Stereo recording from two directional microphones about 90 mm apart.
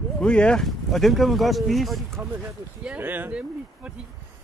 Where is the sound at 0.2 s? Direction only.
10° left (ahead or behind).